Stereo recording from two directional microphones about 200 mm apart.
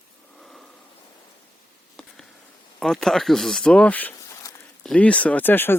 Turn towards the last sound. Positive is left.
turn(degrees=10)  # may be behind; listen again after turning